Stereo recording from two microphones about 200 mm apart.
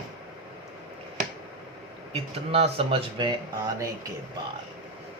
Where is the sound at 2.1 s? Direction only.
30° right (ahead or behind).